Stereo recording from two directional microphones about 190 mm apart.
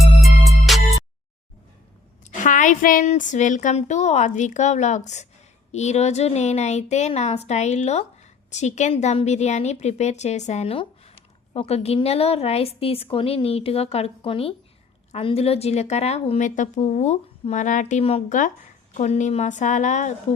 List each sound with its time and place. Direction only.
0.0 s music: centre (ahead or behind)
2.4 s a woman's voice: 40° left (ahead or behind)